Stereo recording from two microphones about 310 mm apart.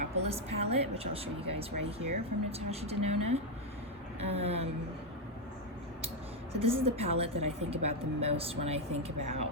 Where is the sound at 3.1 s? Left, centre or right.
Right.